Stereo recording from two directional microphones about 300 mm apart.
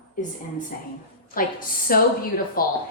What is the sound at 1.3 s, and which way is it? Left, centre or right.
A woman's voice, left.